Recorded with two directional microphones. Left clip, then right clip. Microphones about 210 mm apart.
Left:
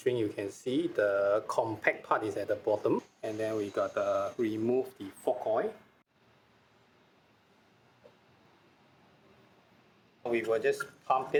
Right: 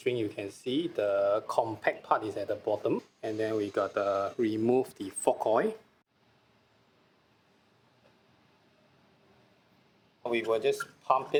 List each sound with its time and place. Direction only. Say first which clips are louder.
0.0 s speech: left 1 dB; 10° right (ahead or behind)
4.7 s speech: right 3 dB; 30° right (ahead or behind)
10.5 s speech: right 1 dB; 25° right (ahead or behind)